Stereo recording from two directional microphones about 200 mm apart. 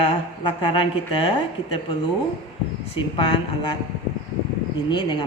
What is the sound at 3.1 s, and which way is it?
Speech, 25° left (ahead or behind).